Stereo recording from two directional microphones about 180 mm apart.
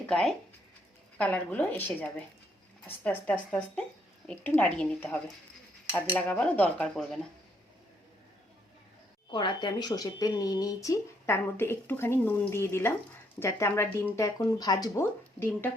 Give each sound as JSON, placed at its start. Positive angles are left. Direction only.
{"t": 0.1, "sound": "speech", "side_deg": 0}
{"t": 9.3, "sound": "speech", "side_deg": 25}